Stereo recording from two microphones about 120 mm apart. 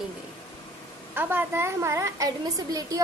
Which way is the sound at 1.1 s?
20° right (ahead or behind).